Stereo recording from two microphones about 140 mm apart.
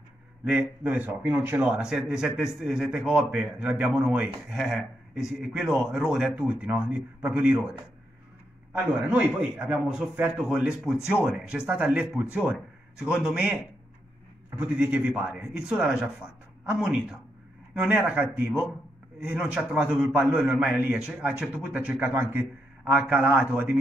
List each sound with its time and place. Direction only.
0.5 s a man's voice: 10° right (ahead or behind)
8.7 s a man's voice: 10° right (ahead or behind)